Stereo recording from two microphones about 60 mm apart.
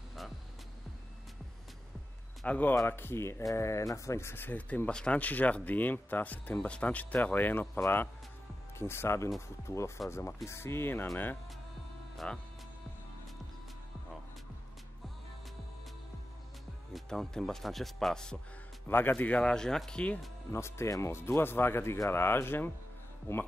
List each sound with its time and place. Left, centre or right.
2.4 s speech: left
2.9 s speech: left
3.5 s speech: left
4.5 s speech: left
12.2 s speech: centre
16.9 s speech: centre
18.9 s speech: left
19.5 s speech: centre
20.5 s speech: left
21.3 s speech: left